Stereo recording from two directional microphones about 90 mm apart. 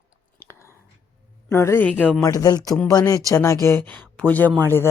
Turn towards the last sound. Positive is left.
turn(degrees=25)  # may be behind; listen again after turning